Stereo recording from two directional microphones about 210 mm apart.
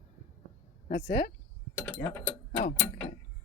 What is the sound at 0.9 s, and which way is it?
Speech, 45° left (ahead or behind).